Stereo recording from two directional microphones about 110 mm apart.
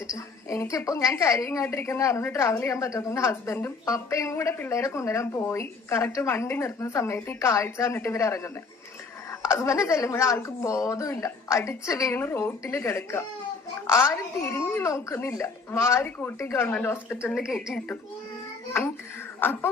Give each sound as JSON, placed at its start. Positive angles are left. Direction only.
{"t": 0.5, "sound": "a woman's voice", "side_deg": 25}
{"t": 9.5, "sound": "a woman's voice", "side_deg": 25}
{"t": 14.4, "sound": "a woman's voice", "side_deg": 20}
{"t": 17.3, "sound": "a woman's voice", "side_deg": -5}
{"t": 19.4, "sound": "speech", "side_deg": 15}